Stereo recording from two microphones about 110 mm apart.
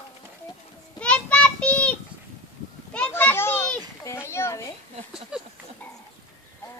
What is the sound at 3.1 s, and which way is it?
Children playing, 20° left (ahead or behind).